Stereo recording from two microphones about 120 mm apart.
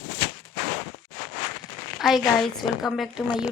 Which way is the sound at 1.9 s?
Centre (ahead or behind).